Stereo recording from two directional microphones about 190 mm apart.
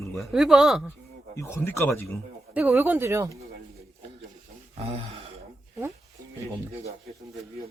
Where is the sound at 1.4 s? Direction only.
15° left (ahead or behind).